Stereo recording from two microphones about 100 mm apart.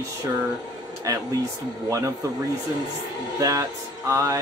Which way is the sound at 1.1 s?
35° right (ahead or behind).